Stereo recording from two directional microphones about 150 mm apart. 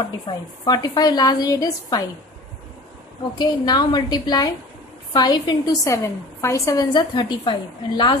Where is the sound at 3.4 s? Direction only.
30° left (ahead or behind).